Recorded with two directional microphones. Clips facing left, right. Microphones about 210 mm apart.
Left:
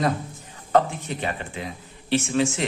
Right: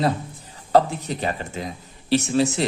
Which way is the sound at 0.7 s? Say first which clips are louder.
Right 2 dB; 35° right (ahead or behind).